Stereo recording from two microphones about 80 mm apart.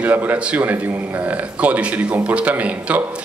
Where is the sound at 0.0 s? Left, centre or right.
Right.